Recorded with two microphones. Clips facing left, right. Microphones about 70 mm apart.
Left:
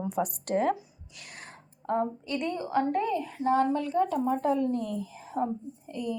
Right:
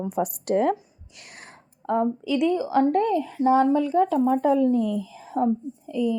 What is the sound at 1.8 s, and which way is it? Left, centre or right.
A woman's voice, right.